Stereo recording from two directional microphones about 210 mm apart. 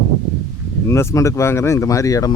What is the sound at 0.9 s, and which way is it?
Speech, 15° left (ahead or behind).